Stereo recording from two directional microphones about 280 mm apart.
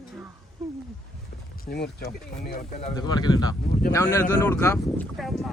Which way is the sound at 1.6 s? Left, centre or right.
Left.